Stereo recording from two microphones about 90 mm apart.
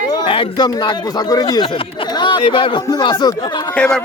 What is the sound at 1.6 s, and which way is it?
Speech, 75° left (ahead or behind).